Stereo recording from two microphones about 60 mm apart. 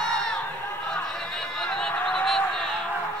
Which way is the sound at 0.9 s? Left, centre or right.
Centre.